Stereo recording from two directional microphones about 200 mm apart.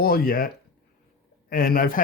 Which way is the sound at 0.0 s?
50° left (ahead or behind).